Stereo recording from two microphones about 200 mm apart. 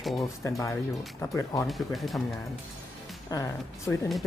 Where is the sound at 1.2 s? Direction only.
15° left (ahead or behind).